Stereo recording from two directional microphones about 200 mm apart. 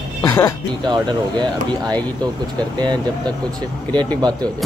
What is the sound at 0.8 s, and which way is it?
Speech, 20° right (ahead or behind).